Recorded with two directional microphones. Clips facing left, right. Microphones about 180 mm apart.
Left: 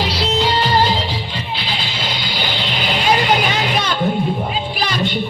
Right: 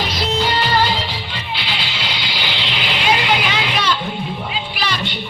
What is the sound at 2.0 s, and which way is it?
Music, 45° left (ahead or behind).